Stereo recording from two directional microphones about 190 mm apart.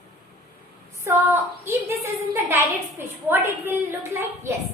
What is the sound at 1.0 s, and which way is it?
A woman's voice, 15° right (ahead or behind).